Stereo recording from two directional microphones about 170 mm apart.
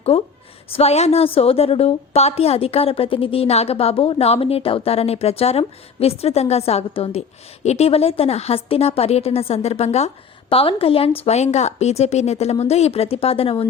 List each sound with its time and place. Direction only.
0.1 s a woman's voice: 35° left (ahead or behind)